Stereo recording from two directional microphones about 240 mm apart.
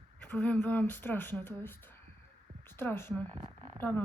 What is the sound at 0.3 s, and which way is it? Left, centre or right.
Speech, centre.